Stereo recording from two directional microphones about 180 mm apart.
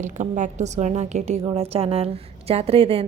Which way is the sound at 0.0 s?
45° right (ahead or behind).